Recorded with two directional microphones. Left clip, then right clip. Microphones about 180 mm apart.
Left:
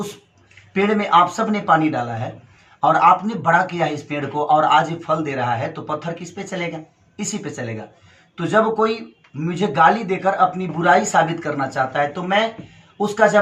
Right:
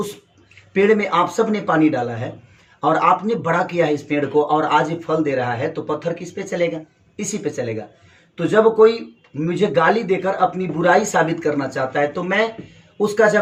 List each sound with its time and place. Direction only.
0.8 s speech: 20° left (ahead or behind)
8.4 s speech: 20° left (ahead or behind)